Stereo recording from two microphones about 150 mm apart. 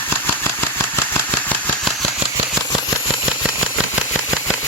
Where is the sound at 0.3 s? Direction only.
15° left (ahead or behind).